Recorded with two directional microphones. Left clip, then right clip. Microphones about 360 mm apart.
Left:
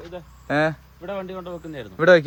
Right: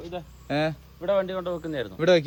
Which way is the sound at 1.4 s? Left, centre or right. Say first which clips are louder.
Right 4 dB; right.